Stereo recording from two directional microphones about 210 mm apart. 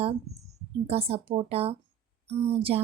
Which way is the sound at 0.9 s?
30° right (ahead or behind).